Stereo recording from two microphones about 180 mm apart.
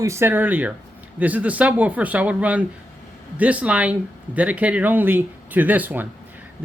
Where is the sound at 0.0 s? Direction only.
15° right (ahead or behind).